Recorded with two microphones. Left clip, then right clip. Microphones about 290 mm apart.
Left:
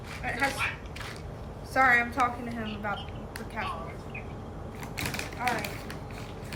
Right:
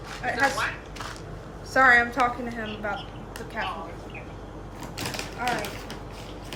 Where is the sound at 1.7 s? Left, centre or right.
Right.